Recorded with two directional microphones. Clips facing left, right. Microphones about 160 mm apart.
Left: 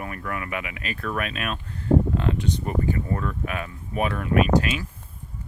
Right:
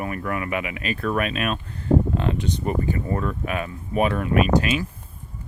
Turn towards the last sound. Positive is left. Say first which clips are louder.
# right 1 dB
turn(degrees=-20)  # may be behind; listen again after turning